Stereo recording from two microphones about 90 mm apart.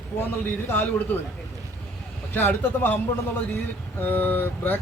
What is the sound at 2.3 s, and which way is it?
Speech, 25° left (ahead or behind).